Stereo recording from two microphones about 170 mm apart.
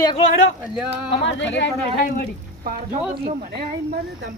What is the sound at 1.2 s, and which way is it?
Speech, 90° left.